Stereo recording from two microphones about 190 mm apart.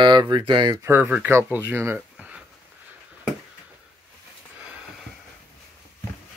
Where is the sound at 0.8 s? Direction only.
10° right (ahead or behind).